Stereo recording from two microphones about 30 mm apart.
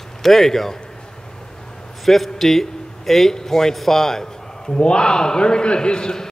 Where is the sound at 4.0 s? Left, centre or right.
Centre.